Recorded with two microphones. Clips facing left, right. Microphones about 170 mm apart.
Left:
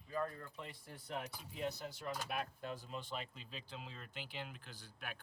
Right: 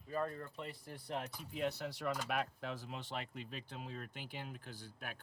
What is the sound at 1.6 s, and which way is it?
A man's voice, 70° right (ahead or behind).